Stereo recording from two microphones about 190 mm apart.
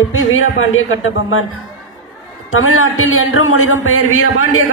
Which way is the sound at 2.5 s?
90° left.